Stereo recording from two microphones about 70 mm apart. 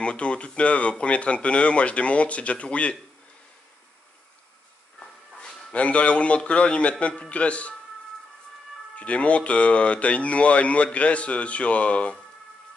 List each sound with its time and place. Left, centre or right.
0.0 s speech: centre
4.9 s speech: centre
8.9 s speech: centre